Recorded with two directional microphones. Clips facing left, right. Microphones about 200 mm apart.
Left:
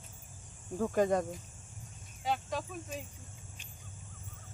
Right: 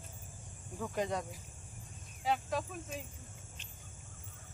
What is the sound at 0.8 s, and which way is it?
Speech, 45° left (ahead or behind).